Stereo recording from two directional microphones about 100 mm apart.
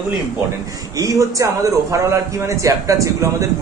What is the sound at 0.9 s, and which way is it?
A man's voice, 35° right (ahead or behind).